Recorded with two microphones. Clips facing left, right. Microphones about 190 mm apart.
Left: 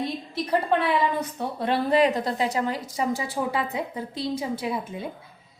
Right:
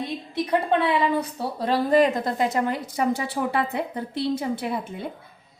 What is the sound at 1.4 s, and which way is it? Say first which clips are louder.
A woman's voice: right 1 dB; 40° right (ahead or behind).